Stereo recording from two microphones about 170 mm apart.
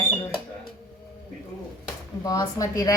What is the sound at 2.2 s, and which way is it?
Speech, 20° left (ahead or behind).